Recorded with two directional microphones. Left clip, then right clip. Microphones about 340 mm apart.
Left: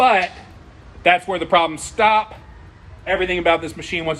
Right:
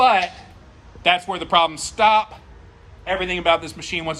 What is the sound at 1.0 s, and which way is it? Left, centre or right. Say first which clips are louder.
A man's voice: left 3 dB; centre.